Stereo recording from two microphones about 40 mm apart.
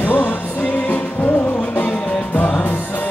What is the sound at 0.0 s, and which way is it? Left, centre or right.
Music, left.